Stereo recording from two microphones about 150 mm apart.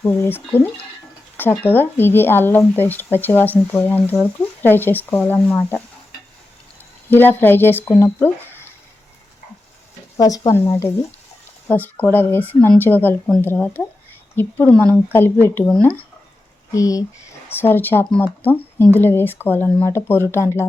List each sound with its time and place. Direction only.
0.0 s speech: 15° left (ahead or behind)
7.1 s speech: 10° left (ahead or behind)
10.2 s speech: 25° left (ahead or behind)
16.7 s speech: 25° left (ahead or behind)